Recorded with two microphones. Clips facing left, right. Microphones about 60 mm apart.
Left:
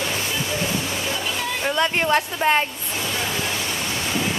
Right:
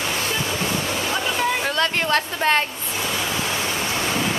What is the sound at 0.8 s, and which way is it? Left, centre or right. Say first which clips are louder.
Waterfall: right 2 dB; right.